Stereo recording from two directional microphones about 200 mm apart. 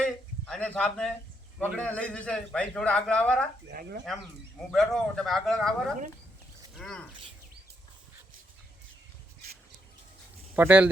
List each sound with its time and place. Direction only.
0.0 s a sound: 5° left (ahead or behind)
1.5 s a man's voice: 5° left (ahead or behind)
3.7 s speech: 50° right (ahead or behind)
4.7 s a man's voice: centre (ahead or behind)
6.7 s a man's voice: 5° left (ahead or behind)
10.5 s speech: 10° right (ahead or behind)